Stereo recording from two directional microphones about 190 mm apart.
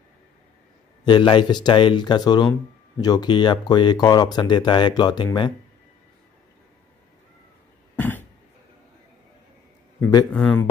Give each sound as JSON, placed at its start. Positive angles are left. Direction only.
{"t": 1.0, "sound": "speech", "side_deg": 25}
{"t": 7.9, "sound": "cough", "side_deg": 10}
{"t": 10.3, "sound": "a man's voice", "side_deg": 5}